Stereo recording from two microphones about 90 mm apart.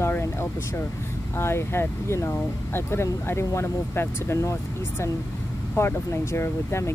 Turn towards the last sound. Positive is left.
turn(degrees=30)  # may be behind; listen again after turning